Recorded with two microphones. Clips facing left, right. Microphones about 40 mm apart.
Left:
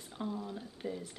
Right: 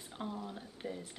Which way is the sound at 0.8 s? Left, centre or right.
Right.